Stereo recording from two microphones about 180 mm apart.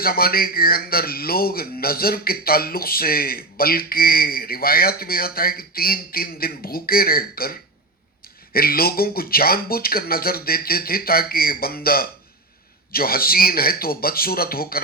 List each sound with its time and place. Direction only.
0.0 s speech: 55° left (ahead or behind)
8.5 s speech: 55° left (ahead or behind)